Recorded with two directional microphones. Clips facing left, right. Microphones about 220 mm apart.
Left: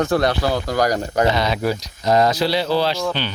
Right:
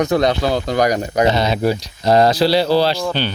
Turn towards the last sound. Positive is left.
turn(degrees=-35)  # may be behind; listen again after turning